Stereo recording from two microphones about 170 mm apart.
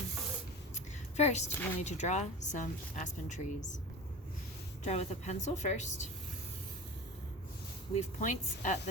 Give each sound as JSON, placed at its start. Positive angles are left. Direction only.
{"t": 1.1, "sound": "a woman's voice", "side_deg": 40}
{"t": 1.5, "sound": "speech", "side_deg": 15}
{"t": 1.8, "sound": "speech", "side_deg": 40}
{"t": 4.8, "sound": "speech", "side_deg": 40}
{"t": 7.9, "sound": "speech", "side_deg": 45}